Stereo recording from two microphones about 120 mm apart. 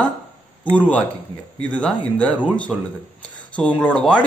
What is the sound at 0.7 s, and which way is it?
A man's voice, 10° left (ahead or behind).